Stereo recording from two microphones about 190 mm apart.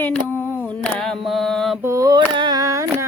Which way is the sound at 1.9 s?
20° right (ahead or behind).